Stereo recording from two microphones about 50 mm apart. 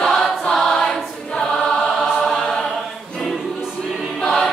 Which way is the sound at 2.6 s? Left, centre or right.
Centre.